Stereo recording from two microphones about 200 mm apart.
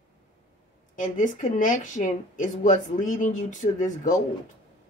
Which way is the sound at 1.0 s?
40° left (ahead or behind).